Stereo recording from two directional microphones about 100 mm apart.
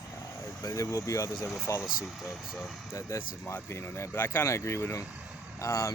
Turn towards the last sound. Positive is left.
turn(degrees=30)  # may be behind; listen again after turning